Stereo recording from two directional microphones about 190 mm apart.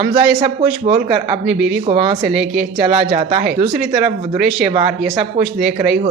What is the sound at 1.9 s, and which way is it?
Speech, 25° right (ahead or behind).